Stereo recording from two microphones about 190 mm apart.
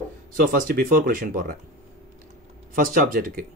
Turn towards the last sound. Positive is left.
turn(degrees=-50)  # may be behind; listen again after turning